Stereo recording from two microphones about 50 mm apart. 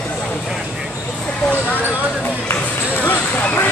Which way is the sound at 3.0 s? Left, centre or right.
Left.